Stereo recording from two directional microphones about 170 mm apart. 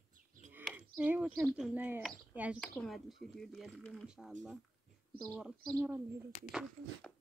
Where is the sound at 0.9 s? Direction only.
10° right (ahead or behind).